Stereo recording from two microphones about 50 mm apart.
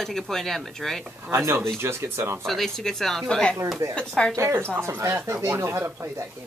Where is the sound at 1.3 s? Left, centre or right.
Right.